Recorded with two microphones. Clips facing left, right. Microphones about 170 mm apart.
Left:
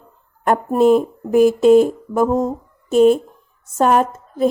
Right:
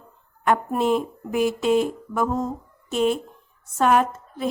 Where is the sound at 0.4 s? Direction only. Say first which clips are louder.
Left 7 dB; 40° left (ahead or behind).